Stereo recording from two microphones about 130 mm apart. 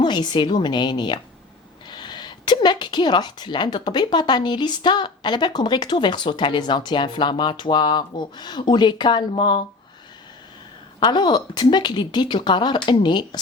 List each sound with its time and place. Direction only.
0.0 s speech: 35° left (ahead or behind)
11.0 s speech: 35° left (ahead or behind)